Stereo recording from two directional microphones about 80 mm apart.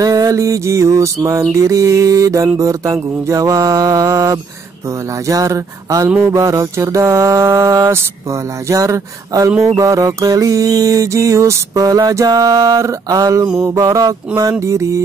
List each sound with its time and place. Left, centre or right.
0.0 s mantra: right
1.6 s music: right
6.0 s mantra: right
6.3 s mantra: right
9.6 s music: right
12.8 s mantra: right
13.7 s music: right
14.6 s mantra: right